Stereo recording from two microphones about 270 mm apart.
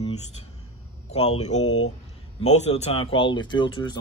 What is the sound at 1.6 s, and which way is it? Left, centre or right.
Speech, left.